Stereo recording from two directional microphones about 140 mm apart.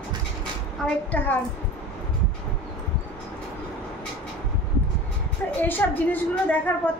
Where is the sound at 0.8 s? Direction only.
10° left (ahead or behind).